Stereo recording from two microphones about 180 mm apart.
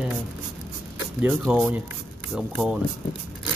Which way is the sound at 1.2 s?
5° right (ahead or behind).